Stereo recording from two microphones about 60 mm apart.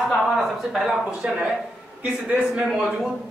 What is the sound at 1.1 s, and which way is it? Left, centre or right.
Speech, centre.